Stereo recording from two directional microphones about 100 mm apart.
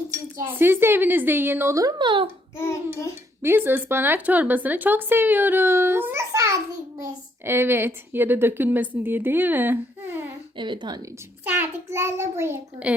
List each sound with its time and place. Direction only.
0.1 s a woman's voice: 25° right (ahead or behind)
1.7 s speech: 35° right (ahead or behind)
2.0 s a woman's voice: 50° right (ahead or behind)
3.4 s a woman's voice: 20° right (ahead or behind)
6.3 s a sound: 35° right (ahead or behind)
7.0 s a woman's voice: 25° right (ahead or behind)
10.6 s a woman's voice: 50° right (ahead or behind)
11.4 s a woman's voice: 20° right (ahead or behind)